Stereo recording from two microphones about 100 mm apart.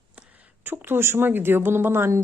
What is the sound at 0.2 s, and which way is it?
A woman's voice, 20° right (ahead or behind).